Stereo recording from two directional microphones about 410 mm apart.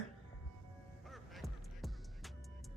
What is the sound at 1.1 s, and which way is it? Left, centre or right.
Music, centre.